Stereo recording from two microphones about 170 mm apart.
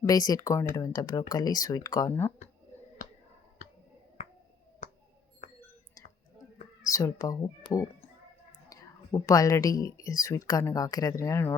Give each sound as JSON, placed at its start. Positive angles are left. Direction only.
{"t": 0.1, "sound": "speech", "side_deg": 20}
{"t": 4.8, "sound": "finger snapping", "side_deg": 45}
{"t": 6.8, "sound": "speech", "side_deg": 20}